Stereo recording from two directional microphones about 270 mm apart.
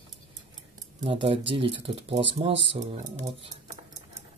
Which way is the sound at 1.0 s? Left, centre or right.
Right.